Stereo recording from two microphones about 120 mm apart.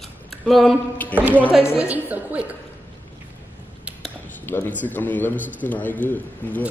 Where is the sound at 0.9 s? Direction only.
15° left (ahead or behind).